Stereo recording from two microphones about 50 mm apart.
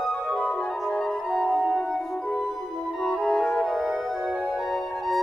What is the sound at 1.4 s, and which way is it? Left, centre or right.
Music, centre.